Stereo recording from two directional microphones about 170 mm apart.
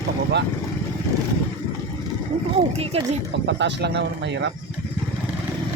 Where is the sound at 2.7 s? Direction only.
35° right (ahead or behind).